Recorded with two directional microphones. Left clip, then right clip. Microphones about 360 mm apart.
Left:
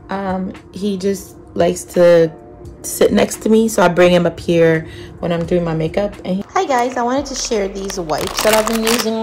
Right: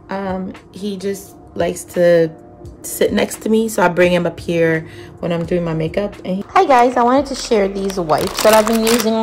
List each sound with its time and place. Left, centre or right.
0.1 s speech: centre
6.5 s speech: centre